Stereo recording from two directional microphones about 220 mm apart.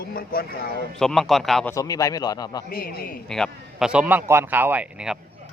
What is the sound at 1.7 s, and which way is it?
Speech, 15° left (ahead or behind).